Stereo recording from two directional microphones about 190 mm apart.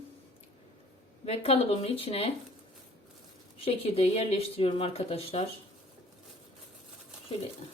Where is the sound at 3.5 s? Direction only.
30° left (ahead or behind).